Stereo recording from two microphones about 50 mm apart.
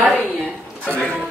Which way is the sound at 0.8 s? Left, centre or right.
Left.